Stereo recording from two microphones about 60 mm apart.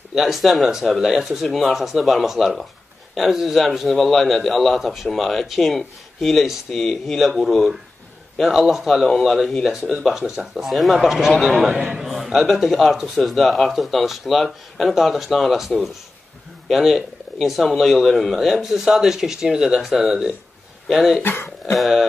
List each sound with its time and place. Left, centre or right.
0.1 s a man's voice: centre
9.8 s a man's voice: centre
21.2 s speech: left
21.7 s a man's voice: centre